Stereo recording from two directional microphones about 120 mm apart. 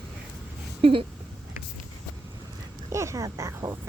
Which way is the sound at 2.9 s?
25° right (ahead or behind).